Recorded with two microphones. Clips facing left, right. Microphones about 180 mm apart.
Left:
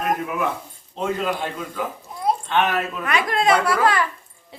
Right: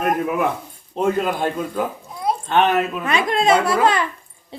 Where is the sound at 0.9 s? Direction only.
50° right (ahead or behind).